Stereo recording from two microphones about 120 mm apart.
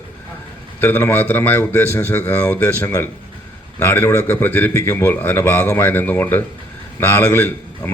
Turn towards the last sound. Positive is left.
turn(degrees=20)  # may be behind; listen again after turning